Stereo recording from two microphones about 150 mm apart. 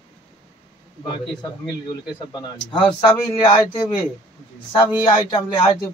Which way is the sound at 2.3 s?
35° left (ahead or behind).